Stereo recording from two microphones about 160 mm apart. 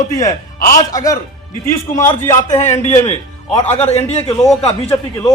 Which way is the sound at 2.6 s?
45° left (ahead or behind).